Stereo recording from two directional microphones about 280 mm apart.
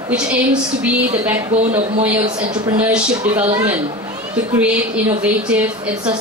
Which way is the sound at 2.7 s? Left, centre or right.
Centre.